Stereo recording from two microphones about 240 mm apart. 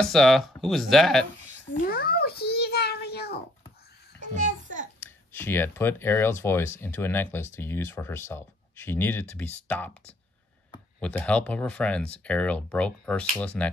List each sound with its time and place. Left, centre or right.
0.0 s speech: centre
1.7 s a sound: left
4.2 s music: right
5.0 s speech: centre